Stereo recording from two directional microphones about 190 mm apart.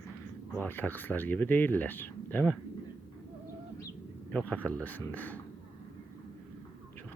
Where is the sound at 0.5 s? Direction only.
10° left (ahead or behind).